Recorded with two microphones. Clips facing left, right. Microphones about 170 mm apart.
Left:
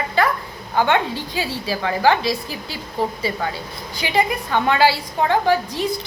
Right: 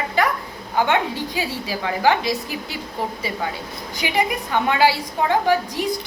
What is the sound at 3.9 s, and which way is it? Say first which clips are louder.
A woman's voice: left 2 dB; 15° right (ahead or behind).